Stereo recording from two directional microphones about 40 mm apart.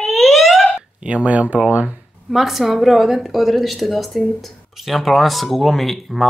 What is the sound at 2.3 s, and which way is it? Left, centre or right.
A woman's voice, centre.